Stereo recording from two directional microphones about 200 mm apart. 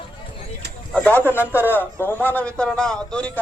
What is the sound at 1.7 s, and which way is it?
Speech, 10° left (ahead or behind).